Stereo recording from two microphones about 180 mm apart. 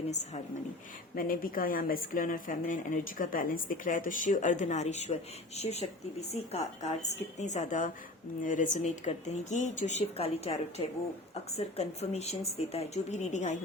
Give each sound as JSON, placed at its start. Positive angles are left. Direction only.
{"t": 0.1, "sound": "speech", "side_deg": 40}
{"t": 1.1, "sound": "speech", "side_deg": 50}